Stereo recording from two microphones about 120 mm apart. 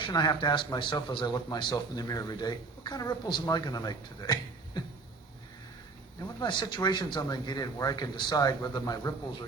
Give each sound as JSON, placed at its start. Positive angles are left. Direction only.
{"t": 0.0, "sound": "a man's voice", "side_deg": 35}
{"t": 6.4, "sound": "a man's voice", "side_deg": 40}